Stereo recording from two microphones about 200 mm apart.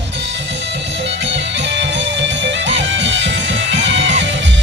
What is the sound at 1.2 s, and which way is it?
Music, 60° right (ahead or behind).